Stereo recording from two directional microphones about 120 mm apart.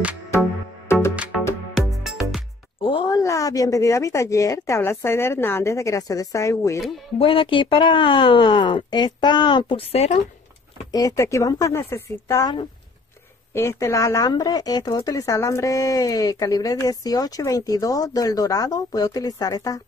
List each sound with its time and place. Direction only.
1.1 s music: 10° right (ahead or behind)
2.8 s a sound: 45° left (ahead or behind)
3.1 s a woman's voice: 30° left (ahead or behind)
7.2 s speech: 50° left (ahead or behind)
10.9 s a woman's voice: 30° left (ahead or behind)